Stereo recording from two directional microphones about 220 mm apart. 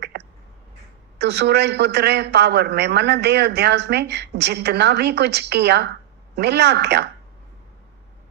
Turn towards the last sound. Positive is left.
turn(degrees=-50)  # may be behind; listen again after turning